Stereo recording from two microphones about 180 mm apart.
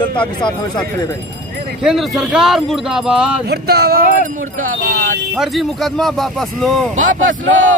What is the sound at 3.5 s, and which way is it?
Speech, 65° right (ahead or behind).